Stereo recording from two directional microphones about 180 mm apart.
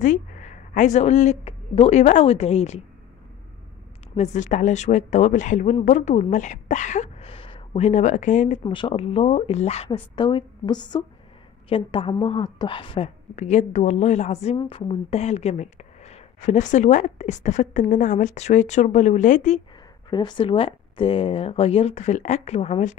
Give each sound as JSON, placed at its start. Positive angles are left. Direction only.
{"t": 0.0, "sound": "speech", "side_deg": 45}
{"t": 4.2, "sound": "speech", "side_deg": 40}
{"t": 8.6, "sound": "speech", "side_deg": 30}
{"t": 10.1, "sound": "a woman's voice", "side_deg": 25}
{"t": 20.1, "sound": "speech", "side_deg": 25}